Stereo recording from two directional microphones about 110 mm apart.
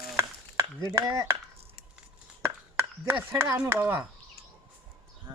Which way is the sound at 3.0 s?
25° right (ahead or behind).